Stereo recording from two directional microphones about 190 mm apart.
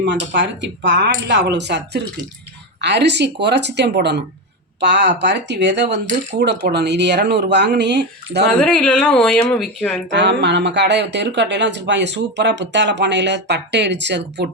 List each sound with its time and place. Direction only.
0.3 s speech: 70° right (ahead or behind)
8.4 s speech: 5° left (ahead or behind)
10.2 s speech: 65° right (ahead or behind)